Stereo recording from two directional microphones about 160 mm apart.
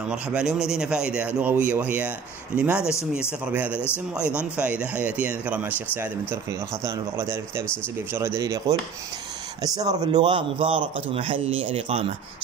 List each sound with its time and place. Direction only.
0.1 s speech: 5° right (ahead or behind)
2.8 s speech: 15° left (ahead or behind)
3.4 s speech: 10° right (ahead or behind)
6.8 s speech: 20° right (ahead or behind)
9.8 s speech: 25° right (ahead or behind)